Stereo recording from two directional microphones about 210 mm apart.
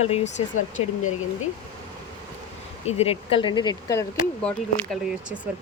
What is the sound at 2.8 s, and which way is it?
Speech, 30° left (ahead or behind).